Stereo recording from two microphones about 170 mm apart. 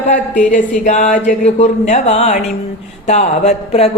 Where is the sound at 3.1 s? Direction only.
40° left (ahead or behind).